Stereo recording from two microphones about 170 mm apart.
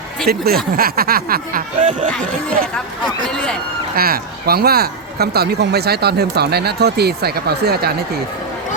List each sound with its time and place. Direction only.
0.3 s speech: 65° right (ahead or behind); by 2.1 s 45° right (ahead or behind)
3.2 s speech: 5° left (ahead or behind)
3.9 s speech: 60° right (ahead or behind)